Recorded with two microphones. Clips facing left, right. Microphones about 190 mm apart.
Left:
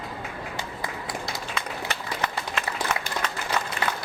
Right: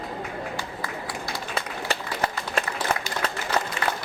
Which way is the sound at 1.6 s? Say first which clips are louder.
Right 5 dB; 30° right (ahead or behind).